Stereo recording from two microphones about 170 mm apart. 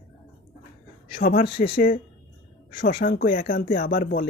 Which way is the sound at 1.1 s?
55° left (ahead or behind).